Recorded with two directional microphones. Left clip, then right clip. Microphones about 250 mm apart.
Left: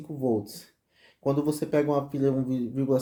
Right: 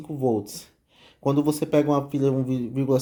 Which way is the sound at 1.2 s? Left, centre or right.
Right.